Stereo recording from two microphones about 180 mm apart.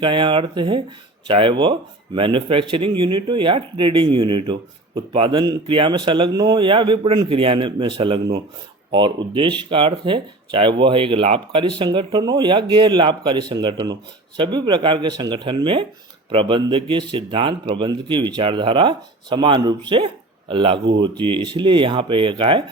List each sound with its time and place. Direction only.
0.0 s speech: 25° right (ahead or behind)